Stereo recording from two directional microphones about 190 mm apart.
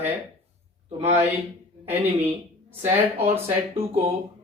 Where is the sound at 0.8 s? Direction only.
35° right (ahead or behind).